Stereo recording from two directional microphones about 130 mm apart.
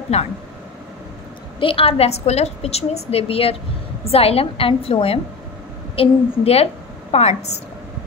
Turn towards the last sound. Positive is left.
turn(degrees=55)  # may be behind; listen again after turning